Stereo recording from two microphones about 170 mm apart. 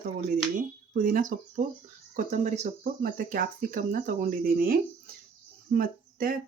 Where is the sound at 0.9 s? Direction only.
55° right (ahead or behind).